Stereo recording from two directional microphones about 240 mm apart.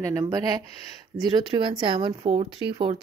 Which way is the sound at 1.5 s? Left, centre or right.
Right.